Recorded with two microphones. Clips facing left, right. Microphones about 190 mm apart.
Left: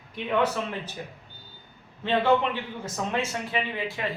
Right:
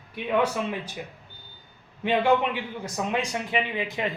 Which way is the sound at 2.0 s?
15° right (ahead or behind).